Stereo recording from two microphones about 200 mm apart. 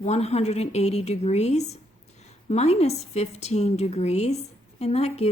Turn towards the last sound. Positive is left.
turn(degrees=30)  # may be behind; listen again after turning